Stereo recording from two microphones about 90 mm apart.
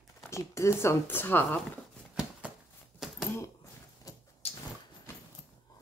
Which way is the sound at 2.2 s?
15° right (ahead or behind).